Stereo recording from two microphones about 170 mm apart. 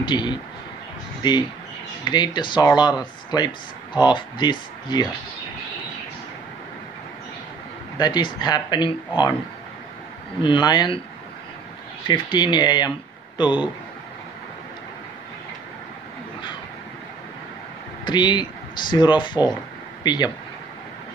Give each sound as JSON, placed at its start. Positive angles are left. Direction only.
{"t": 0.0, "sound": "speech", "side_deg": 25}
{"t": 2.0, "sound": "speech", "side_deg": 25}
{"t": 8.0, "sound": "speech", "side_deg": 25}
{"t": 10.4, "sound": "speech", "side_deg": 25}
{"t": 12.1, "sound": "speech", "side_deg": 25}
{"t": 18.0, "sound": "speech", "side_deg": 25}